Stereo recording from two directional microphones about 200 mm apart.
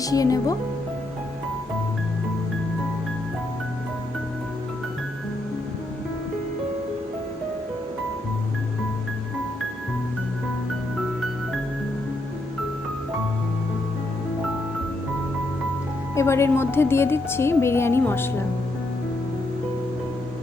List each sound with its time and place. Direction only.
0.0 s a woman's voice: 15° left (ahead or behind)
16.1 s a woman's voice: 15° left (ahead or behind)